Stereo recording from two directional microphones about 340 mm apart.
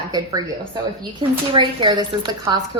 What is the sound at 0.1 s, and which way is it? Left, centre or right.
A woman's voice, centre.